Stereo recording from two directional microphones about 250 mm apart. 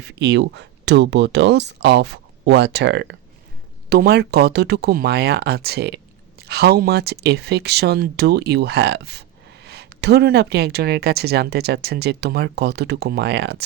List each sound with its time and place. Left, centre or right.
0.0 s speech: right